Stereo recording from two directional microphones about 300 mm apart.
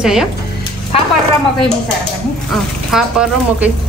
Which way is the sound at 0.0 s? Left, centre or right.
Centre.